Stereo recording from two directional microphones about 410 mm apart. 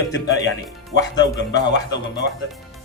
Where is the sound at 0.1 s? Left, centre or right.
Left.